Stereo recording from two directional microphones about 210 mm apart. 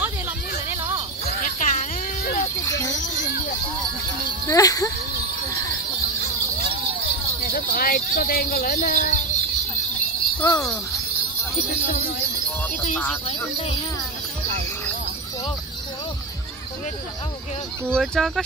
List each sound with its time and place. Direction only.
0.7 s a sound: 10° right (ahead or behind)
1.2 s music: 40° left (ahead or behind)
2.6 s a sound: 15° left (ahead or behind)
4.5 s speech: 15° left (ahead or behind)
7.5 s speech: 45° left (ahead or behind)
10.4 s speech: 15° left (ahead or behind)
13.3 s speech: 30° left (ahead or behind)
17.8 s speech: 5° left (ahead or behind)